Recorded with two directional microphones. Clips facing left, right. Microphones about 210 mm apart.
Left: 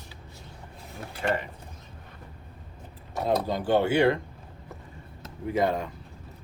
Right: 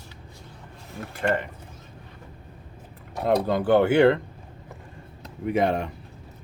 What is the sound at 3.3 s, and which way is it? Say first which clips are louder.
Speech: right 4 dB; 60° right (ahead or behind).